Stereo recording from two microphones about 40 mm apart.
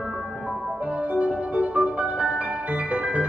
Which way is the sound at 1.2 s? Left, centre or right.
Right.